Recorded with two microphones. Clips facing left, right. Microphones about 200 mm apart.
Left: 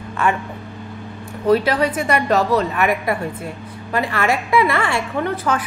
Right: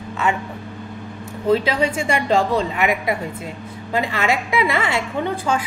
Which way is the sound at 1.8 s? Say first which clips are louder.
Left 2 dB; 25° right (ahead or behind).